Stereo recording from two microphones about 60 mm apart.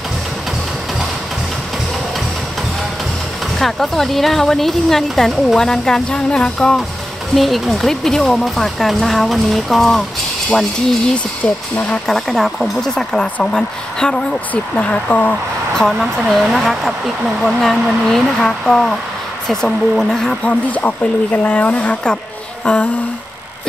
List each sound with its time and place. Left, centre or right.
3.5 s speech: centre
11.4 s speech: left
12.1 s speech: centre
12.9 s a woman's voice: centre
14.5 s speech: left
16.0 s a woman's voice: centre
20.4 s a woman's voice: left